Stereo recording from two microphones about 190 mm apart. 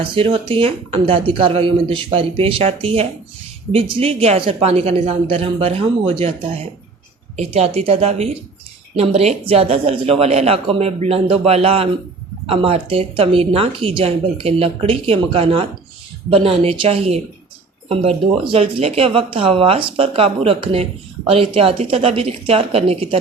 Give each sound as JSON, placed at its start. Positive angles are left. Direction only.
{"t": 0.0, "sound": "speech", "side_deg": -30}